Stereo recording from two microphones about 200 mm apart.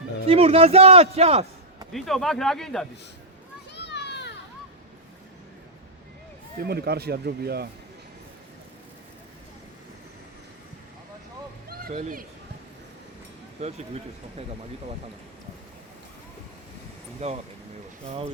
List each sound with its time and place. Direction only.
0.3 s a man's voice: 30° right (ahead or behind)
1.9 s speech: centre (ahead or behind)
3.8 s children playing: 60° left (ahead or behind)
6.6 s speech: 50° right (ahead or behind)
11.7 s speech: 45° right (ahead or behind)
13.6 s a man's voice: 35° right (ahead or behind)
17.2 s a man's voice: 30° right (ahead or behind)